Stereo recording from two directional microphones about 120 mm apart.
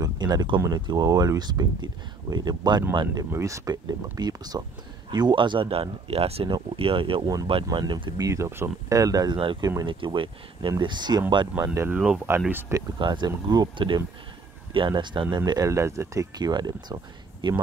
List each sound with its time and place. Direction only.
0.0 s a sound: 35° right (ahead or behind)
0.6 s speech: 35° right (ahead or behind)
3.3 s speech: 25° right (ahead or behind)
9.4 s speech: 45° right (ahead or behind)
11.6 s speech: 25° right (ahead or behind)
11.9 s speech: 10° right (ahead or behind)
13.0 s speech: 40° right (ahead or behind)